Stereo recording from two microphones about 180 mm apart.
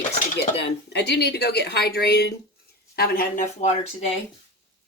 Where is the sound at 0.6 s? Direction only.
70° left (ahead or behind).